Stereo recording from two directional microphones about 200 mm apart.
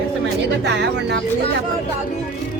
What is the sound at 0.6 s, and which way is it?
Speech, 60° right (ahead or behind).